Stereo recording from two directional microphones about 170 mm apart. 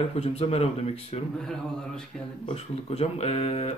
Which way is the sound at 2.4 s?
35° left (ahead or behind).